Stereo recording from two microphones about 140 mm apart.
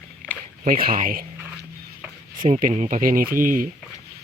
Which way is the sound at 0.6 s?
90° right.